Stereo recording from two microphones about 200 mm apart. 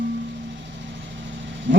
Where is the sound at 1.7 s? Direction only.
65° right (ahead or behind).